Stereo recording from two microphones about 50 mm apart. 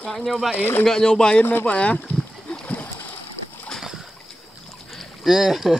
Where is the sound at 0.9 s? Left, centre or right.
Centre.